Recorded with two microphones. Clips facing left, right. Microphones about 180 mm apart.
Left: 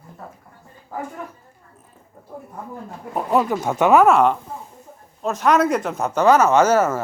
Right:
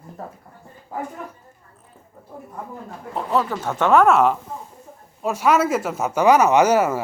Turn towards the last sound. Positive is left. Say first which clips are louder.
# even
turn(degrees=-15)  # may be behind; listen again after turning